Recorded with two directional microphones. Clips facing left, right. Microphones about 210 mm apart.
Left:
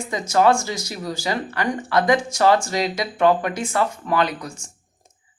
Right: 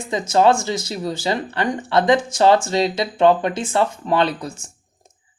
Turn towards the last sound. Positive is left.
turn(degrees=-25)  # may be behind; listen again after turning